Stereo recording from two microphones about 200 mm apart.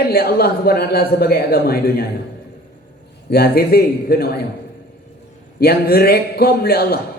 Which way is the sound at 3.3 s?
50° left (ahead or behind).